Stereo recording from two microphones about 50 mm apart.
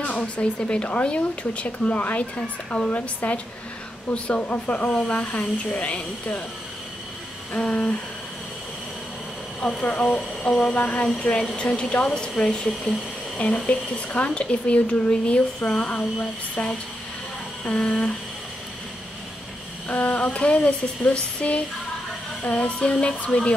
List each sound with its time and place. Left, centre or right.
0.0 s speech: left
7.5 s speech: left
9.6 s speech: centre
11.1 s speech: centre
19.9 s speech: left